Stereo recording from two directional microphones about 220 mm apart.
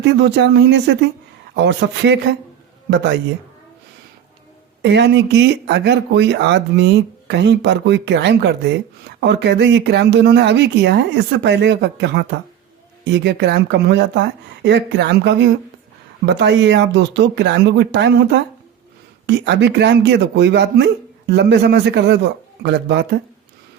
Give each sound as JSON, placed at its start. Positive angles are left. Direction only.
{"t": 0.0, "sound": "speech", "side_deg": -50}
{"t": 4.8, "sound": "speech", "side_deg": -50}